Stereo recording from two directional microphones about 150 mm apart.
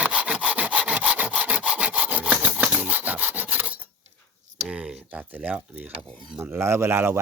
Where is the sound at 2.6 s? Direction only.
5° right (ahead or behind).